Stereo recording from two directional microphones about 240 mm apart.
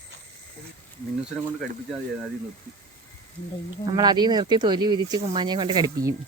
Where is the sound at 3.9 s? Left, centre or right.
Centre.